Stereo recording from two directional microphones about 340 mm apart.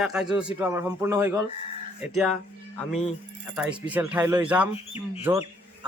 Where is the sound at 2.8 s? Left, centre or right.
Centre.